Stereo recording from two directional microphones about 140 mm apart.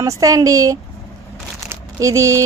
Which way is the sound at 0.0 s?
25° right (ahead or behind).